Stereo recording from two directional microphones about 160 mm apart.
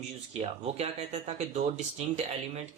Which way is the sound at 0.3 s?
45° right (ahead or behind).